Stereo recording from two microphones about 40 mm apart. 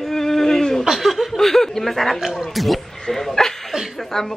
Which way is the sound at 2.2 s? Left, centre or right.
Centre.